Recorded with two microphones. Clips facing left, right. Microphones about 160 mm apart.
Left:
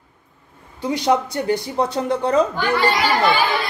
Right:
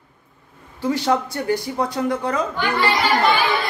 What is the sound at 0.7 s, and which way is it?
Speech, 15° left (ahead or behind).